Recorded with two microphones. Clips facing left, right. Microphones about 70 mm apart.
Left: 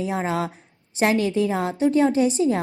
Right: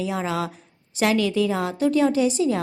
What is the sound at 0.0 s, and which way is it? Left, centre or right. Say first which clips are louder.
A woman's voice: left 1 dB; left.